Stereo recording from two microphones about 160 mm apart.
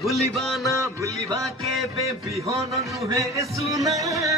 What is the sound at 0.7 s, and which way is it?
Music, 20° right (ahead or behind).